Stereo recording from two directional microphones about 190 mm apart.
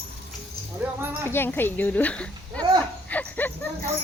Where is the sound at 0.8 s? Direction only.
10° right (ahead or behind).